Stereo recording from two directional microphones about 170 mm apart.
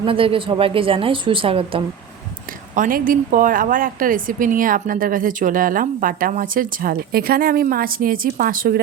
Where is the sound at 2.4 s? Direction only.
50° right (ahead or behind).